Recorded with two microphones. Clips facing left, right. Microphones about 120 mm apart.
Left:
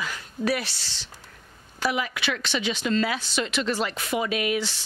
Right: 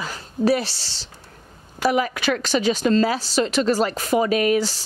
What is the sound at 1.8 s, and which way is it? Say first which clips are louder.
Speech: right 6 dB; 45° right (ahead or behind).